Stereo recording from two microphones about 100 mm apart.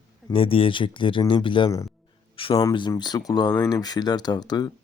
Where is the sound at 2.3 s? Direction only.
60° left (ahead or behind).